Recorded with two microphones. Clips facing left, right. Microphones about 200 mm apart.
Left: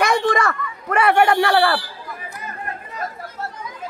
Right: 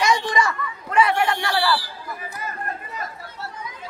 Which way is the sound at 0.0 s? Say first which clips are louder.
Left 3 dB; 55° left (ahead or behind).